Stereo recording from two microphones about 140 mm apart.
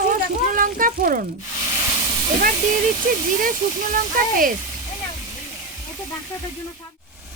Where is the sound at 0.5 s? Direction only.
80° right.